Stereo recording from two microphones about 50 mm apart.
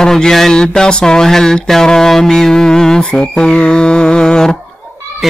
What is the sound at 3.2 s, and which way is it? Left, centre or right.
Music, centre.